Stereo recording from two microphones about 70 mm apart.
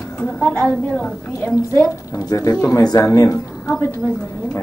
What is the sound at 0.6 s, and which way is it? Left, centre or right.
Speech, centre.